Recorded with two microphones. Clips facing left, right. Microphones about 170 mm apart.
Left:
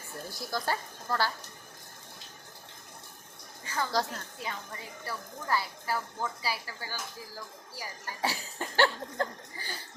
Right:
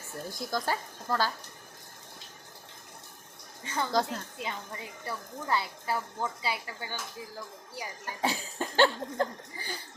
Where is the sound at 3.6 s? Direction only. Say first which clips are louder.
Right 2 dB; 20° right (ahead or behind).